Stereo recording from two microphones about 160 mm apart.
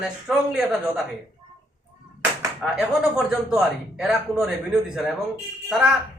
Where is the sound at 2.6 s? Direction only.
5° right (ahead or behind).